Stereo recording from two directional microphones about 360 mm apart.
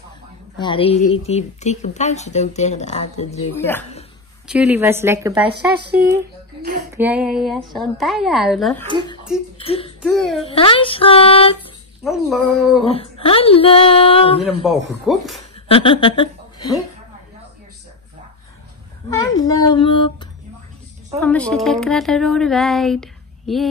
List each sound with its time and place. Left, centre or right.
0.6 s a woman's voice: centre
4.5 s a woman's voice: centre
5.9 s speech: right
7.0 s speech: centre
9.6 s a sound: centre
10.0 s speech: centre
10.5 s speech: centre
12.0 s speech: centre
12.8 s speech: centre
14.4 s speech: centre
15.5 s a woman's voice: centre
19.1 s speech: centre